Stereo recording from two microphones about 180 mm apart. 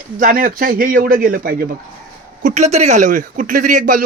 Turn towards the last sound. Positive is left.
turn(degrees=-45)  # may be behind; listen again after turning